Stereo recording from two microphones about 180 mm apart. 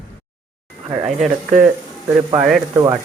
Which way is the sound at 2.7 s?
15° right (ahead or behind).